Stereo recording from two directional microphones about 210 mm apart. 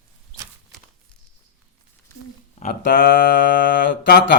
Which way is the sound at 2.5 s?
40° left (ahead or behind).